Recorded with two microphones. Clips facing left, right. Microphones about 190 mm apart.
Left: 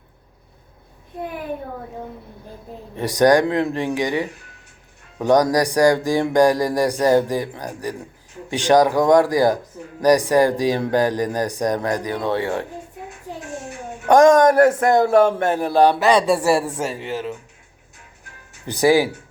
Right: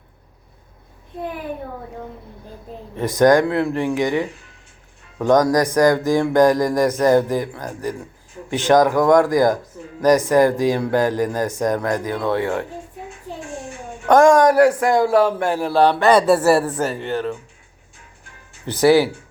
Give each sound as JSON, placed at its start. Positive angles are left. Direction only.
{"t": 2.9, "sound": "speech", "side_deg": 15}
{"t": 14.1, "sound": "speech", "side_deg": 20}
{"t": 16.0, "sound": "speech", "side_deg": 0}
{"t": 18.6, "sound": "speech", "side_deg": 15}